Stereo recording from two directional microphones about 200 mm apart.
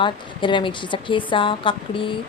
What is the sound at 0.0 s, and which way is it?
Speech, 25° left (ahead or behind).